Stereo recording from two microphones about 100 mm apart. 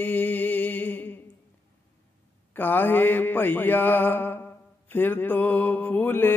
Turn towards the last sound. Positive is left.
turn(degrees=20)  # may be behind; listen again after turning